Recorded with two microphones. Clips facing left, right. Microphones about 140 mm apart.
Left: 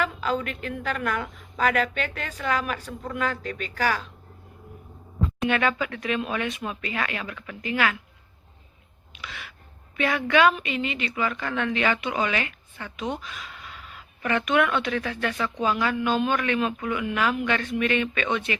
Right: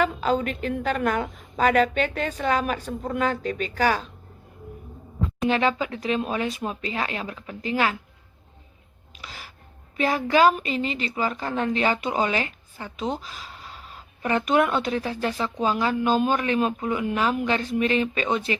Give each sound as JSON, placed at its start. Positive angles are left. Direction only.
{"t": 0.0, "sound": "a woman's voice", "side_deg": -25}
{"t": 5.5, "sound": "a woman's voice", "side_deg": -30}
{"t": 9.1, "sound": "gasp", "side_deg": -35}
{"t": 10.0, "sound": "a woman's voice", "side_deg": -35}